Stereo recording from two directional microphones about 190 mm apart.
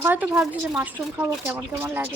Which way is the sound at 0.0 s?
10° right (ahead or behind).